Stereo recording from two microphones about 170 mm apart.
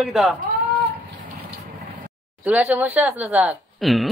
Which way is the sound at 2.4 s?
10° right (ahead or behind).